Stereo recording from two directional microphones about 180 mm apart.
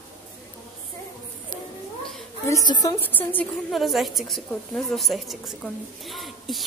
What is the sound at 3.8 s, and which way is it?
A woman's voice, centre (ahead or behind).